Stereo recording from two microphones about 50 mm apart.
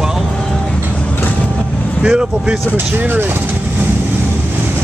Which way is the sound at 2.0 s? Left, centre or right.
Centre.